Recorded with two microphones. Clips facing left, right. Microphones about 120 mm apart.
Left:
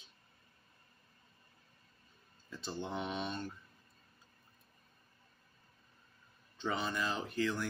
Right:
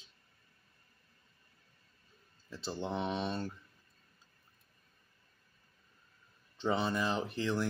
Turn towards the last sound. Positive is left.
turn(degrees=-25)  # may be behind; listen again after turning